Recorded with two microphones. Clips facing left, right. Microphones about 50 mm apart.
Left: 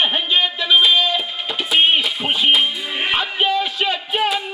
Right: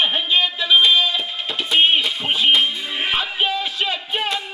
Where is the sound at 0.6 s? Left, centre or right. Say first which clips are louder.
Even; centre.